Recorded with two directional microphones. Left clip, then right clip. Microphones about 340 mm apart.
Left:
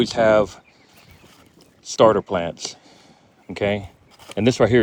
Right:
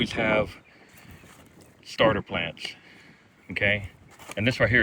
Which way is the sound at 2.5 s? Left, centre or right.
Left.